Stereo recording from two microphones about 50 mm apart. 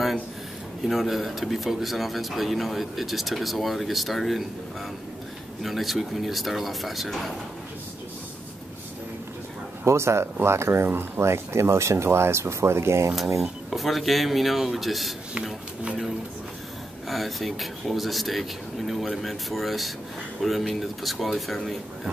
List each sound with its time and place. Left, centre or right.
0.8 s speech: centre
5.6 s speech: centre
9.8 s speech: right
13.4 s speech: centre
17.1 s speech: centre